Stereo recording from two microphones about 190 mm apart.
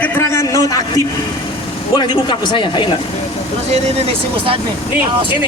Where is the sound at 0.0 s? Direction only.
15° left (ahead or behind).